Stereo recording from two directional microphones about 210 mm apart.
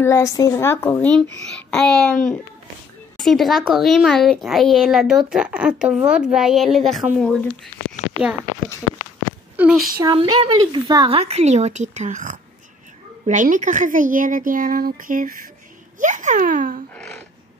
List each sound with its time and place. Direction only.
0.0 s a woman's voice: 15° left (ahead or behind)
9.6 s speech: 5° right (ahead or behind)
10.0 s speech: 25° right (ahead or behind); by 16.8 s 40° right (ahead or behind)
16.9 s a sound: 5° left (ahead or behind)